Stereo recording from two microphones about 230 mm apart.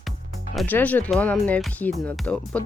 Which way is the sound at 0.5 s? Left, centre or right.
Centre.